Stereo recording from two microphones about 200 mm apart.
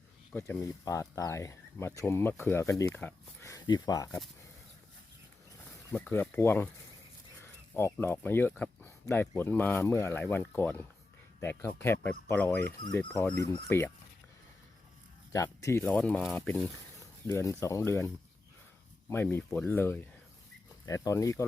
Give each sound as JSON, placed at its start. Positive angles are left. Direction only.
{"t": 0.3, "sound": "speech", "side_deg": 15}
{"t": 5.9, "sound": "speech", "side_deg": 10}
{"t": 15.3, "sound": "speech", "side_deg": 15}
{"t": 17.2, "sound": "speech", "side_deg": 15}
{"t": 19.1, "sound": "speech", "side_deg": 10}